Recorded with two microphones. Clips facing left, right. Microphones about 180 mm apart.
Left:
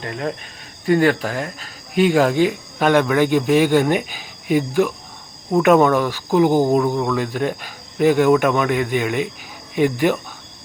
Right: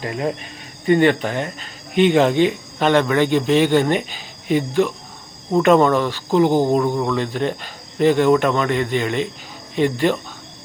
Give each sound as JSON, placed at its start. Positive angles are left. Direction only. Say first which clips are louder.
{"t": 0.0, "sound": "speech", "louder": "right 2 dB", "side_deg": -5}